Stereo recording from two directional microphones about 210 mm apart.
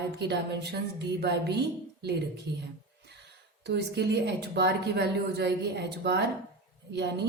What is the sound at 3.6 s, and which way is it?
A woman's voice, 50° right (ahead or behind).